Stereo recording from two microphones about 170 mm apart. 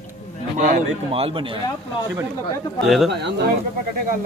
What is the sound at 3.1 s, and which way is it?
Speech, 90° right.